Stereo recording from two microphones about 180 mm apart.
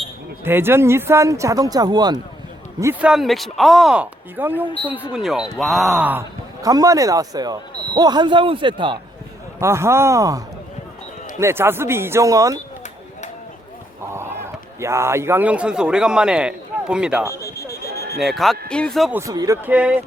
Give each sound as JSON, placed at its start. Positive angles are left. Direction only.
{"t": 0.4, "sound": "speech", "side_deg": -10}
{"t": 2.8, "sound": "speech", "side_deg": -5}
{"t": 9.6, "sound": "speech", "side_deg": -15}
{"t": 14.1, "sound": "a man's voice", "side_deg": -15}
{"t": 17.3, "sound": "a sound", "side_deg": 20}
{"t": 17.9, "sound": "a sound", "side_deg": -60}
{"t": 18.2, "sound": "speech", "side_deg": 0}
{"t": 19.1, "sound": "speech", "side_deg": -20}
{"t": 19.6, "sound": "speech", "side_deg": -10}